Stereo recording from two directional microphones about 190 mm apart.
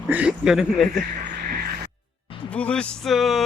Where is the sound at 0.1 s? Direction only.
5° right (ahead or behind).